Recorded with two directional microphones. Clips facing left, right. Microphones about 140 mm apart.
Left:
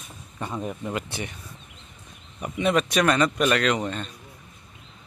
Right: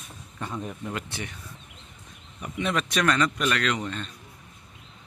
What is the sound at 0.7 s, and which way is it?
Speech, 10° left (ahead or behind).